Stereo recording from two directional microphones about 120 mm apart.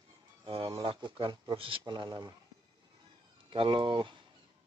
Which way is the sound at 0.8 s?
40° right (ahead or behind).